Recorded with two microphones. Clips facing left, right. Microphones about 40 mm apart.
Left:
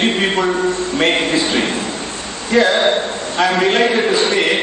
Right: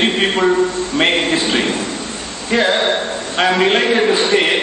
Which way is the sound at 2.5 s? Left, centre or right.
Right.